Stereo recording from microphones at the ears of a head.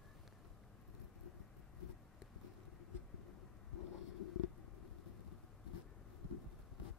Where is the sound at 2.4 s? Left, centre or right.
Left.